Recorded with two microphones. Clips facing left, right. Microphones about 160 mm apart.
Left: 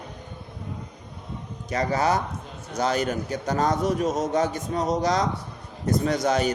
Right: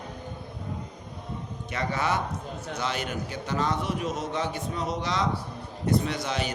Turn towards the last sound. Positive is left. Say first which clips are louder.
# left 7 dB
turn(degrees=45)  # may be behind; listen again after turning